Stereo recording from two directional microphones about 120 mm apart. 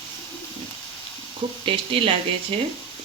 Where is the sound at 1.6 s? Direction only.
50° right (ahead or behind).